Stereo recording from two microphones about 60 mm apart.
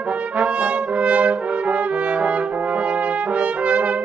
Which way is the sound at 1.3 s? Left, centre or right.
Centre.